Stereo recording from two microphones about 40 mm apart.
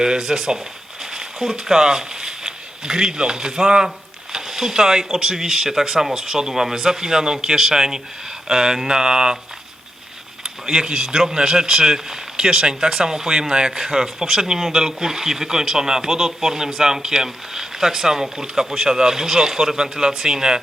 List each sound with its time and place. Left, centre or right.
0.0 s speech: centre
10.4 s speech: centre